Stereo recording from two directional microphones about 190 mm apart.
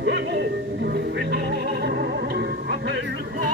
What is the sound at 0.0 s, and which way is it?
Speech, 65° right (ahead or behind).